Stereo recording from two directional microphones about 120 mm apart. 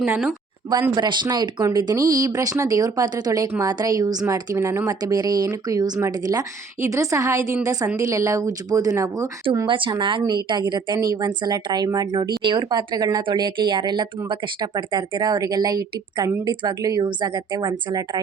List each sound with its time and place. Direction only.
0.7 s a woman's voice: 35° right (ahead or behind)
9.6 s a woman's voice: 45° right (ahead or behind)